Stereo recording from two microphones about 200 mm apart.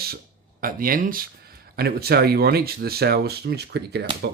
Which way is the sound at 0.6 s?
45° right (ahead or behind).